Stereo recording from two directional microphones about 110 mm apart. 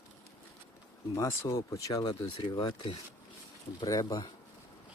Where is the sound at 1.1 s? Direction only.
25° left (ahead or behind).